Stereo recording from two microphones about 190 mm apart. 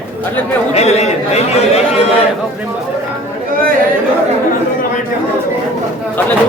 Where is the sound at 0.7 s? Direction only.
35° left (ahead or behind).